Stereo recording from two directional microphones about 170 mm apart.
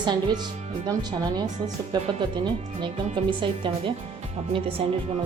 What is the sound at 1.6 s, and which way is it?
Speech, 25° right (ahead or behind).